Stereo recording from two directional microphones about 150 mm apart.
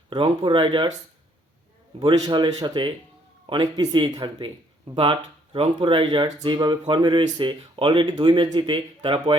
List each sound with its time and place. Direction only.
0.1 s speech: 35° right (ahead or behind)
2.0 s speech: 30° right (ahead or behind)
5.5 s speech: 35° right (ahead or behind)